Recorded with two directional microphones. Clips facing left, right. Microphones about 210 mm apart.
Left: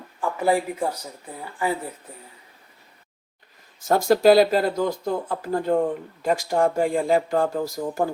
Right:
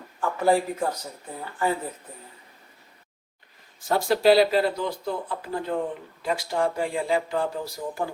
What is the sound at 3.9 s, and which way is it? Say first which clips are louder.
Speech: left 3 dB; 45° left (ahead or behind).